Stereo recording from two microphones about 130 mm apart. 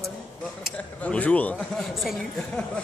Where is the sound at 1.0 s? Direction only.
10° left (ahead or behind).